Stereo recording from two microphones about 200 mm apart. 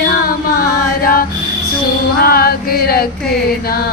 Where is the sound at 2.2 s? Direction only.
50° left (ahead or behind).